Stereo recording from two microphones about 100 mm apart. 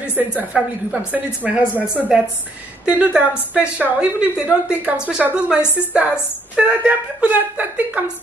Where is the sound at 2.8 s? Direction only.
10° right (ahead or behind).